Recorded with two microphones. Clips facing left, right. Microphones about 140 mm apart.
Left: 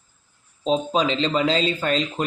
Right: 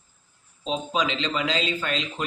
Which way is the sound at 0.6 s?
35° left (ahead or behind).